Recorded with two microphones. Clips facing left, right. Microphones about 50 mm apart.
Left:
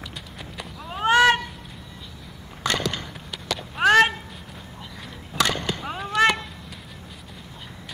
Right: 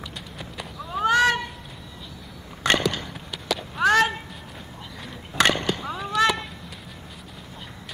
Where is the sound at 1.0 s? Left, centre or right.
Left.